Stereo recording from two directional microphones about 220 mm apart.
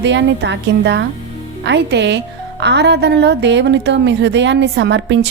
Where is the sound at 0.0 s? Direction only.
55° right (ahead or behind).